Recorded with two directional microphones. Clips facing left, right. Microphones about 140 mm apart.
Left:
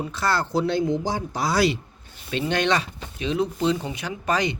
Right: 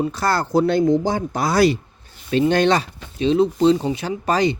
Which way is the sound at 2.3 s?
40° right (ahead or behind).